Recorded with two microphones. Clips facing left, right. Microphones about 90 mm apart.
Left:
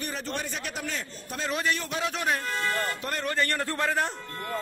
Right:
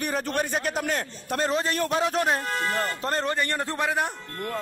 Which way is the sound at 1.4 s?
35° right (ahead or behind).